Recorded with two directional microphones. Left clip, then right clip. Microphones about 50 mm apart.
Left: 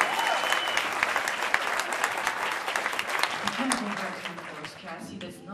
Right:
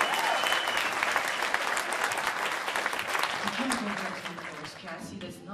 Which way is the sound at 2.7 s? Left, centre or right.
Centre.